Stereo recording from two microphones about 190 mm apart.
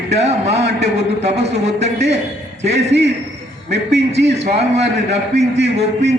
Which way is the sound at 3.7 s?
65° right (ahead or behind).